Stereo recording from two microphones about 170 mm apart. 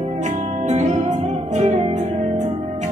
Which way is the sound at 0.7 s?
45° right (ahead or behind).